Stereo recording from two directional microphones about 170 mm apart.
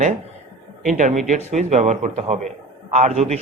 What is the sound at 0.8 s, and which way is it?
A man's voice, 50° right (ahead or behind).